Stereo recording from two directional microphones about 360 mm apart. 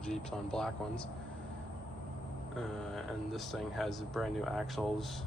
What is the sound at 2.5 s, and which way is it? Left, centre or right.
Speech, centre.